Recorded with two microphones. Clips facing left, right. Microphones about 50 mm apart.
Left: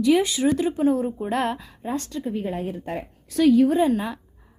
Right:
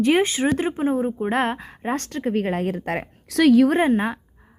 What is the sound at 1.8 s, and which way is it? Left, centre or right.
A woman's voice, right.